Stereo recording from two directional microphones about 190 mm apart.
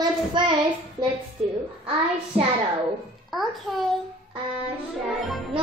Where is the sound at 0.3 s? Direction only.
25° right (ahead or behind).